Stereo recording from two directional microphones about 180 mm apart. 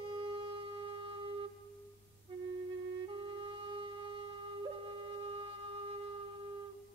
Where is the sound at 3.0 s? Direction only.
25° right (ahead or behind).